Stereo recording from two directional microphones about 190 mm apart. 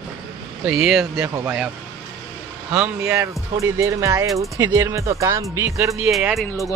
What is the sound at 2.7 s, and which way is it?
Speech, 5° right (ahead or behind).